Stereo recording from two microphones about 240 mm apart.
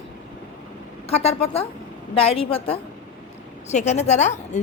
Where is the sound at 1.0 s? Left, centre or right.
Left.